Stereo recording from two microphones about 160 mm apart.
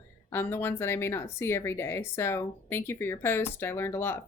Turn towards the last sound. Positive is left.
turn(degrees=15)  # may be behind; listen again after turning